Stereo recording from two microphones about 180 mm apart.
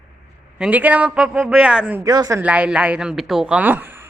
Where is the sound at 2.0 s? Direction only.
20° right (ahead or behind).